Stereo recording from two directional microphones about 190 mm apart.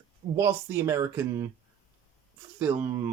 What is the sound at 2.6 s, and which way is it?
Speech, 10° right (ahead or behind).